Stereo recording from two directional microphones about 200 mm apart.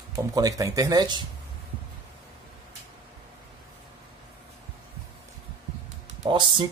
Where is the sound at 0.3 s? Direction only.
15° right (ahead or behind).